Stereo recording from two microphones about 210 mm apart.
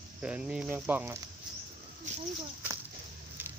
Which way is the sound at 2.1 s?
35° right (ahead or behind).